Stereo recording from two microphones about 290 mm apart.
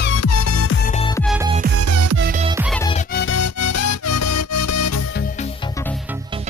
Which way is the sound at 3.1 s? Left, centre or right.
Left.